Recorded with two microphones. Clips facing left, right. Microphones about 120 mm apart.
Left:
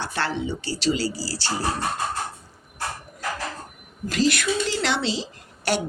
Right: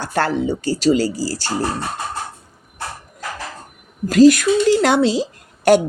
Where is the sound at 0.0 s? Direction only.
45° right (ahead or behind).